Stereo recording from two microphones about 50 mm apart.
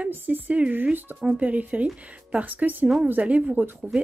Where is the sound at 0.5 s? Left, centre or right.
Right.